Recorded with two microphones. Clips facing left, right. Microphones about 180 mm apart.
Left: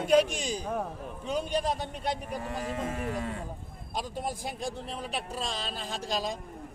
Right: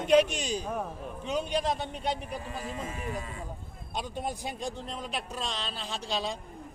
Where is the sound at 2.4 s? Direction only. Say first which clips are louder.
Left 4 dB; 70° left (ahead or behind).